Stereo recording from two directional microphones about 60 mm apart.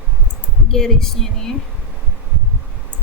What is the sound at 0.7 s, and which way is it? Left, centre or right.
Speech, centre.